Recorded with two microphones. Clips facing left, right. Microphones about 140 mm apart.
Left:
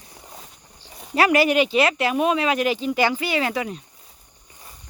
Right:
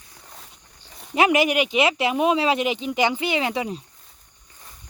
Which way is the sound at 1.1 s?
20° right (ahead or behind).